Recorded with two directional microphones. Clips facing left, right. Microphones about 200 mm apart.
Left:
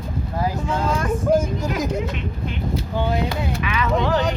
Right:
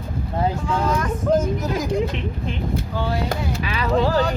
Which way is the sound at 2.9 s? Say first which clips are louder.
Left 4 dB; 20° left (ahead or behind).